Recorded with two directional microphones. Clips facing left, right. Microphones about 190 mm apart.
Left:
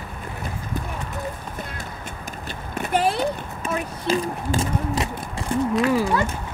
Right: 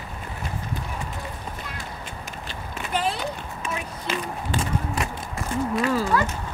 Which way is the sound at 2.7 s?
50° left (ahead or behind).